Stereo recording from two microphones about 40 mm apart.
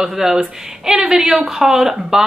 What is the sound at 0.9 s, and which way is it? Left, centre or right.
Speech, right.